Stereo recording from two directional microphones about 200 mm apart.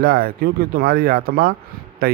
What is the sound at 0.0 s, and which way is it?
Speech, 45° right (ahead or behind).